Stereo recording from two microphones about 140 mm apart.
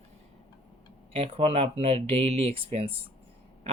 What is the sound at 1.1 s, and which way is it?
Speech, 45° right (ahead or behind).